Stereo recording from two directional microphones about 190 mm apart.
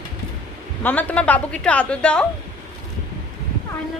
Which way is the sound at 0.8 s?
10° left (ahead or behind).